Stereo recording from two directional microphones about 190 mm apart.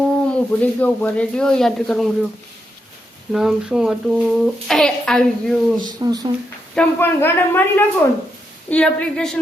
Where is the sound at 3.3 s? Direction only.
5° right (ahead or behind).